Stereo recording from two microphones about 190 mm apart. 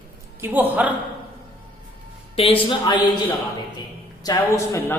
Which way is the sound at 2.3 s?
30° left (ahead or behind).